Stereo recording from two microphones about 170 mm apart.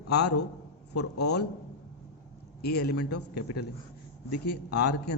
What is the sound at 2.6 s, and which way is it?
Speech, 75° left (ahead or behind).